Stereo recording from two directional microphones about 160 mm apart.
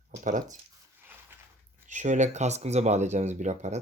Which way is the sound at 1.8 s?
50° right (ahead or behind).